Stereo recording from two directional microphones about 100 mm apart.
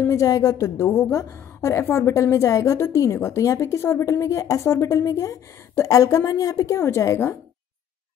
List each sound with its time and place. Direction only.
0.0 s a woman's voice: 30° left (ahead or behind)